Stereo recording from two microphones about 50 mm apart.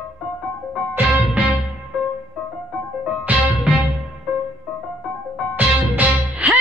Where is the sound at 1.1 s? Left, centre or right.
Right.